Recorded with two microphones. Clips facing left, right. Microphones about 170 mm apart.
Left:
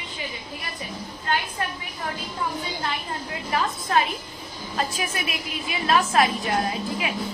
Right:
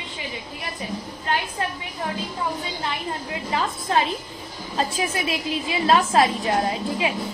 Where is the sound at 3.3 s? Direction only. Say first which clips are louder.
Left 1 dB; 25° right (ahead or behind).